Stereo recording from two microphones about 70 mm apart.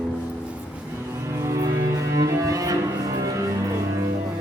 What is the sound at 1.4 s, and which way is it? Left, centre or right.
Music, right.